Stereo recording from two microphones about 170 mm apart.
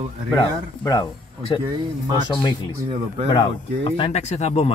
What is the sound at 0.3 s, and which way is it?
Speech, 25° left (ahead or behind).